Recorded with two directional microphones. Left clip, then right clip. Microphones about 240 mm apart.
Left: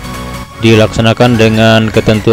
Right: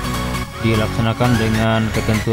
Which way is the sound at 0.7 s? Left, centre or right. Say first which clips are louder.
Left 12 dB; left.